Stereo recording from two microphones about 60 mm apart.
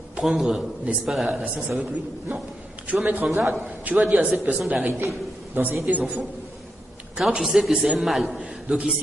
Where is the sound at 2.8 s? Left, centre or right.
Right.